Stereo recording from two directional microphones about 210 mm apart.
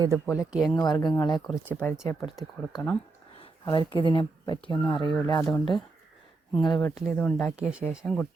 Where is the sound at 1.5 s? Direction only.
5° right (ahead or behind).